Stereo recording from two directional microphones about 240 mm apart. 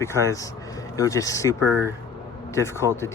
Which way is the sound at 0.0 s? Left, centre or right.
Centre.